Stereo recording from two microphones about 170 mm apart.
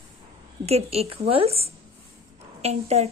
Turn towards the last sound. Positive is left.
turn(degrees=-40)  # may be behind; listen again after turning